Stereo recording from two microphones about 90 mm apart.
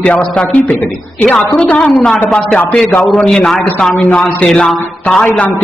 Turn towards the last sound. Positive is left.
turn(degrees=20)  # may be behind; listen again after turning